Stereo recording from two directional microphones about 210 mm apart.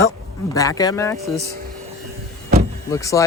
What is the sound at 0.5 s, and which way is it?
Speech, 15° left (ahead or behind).